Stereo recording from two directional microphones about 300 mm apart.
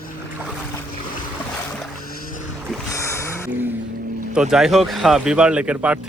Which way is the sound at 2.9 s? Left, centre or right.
Centre.